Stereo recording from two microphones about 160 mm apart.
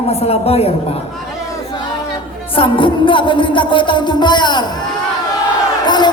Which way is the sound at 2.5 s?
35° left (ahead or behind).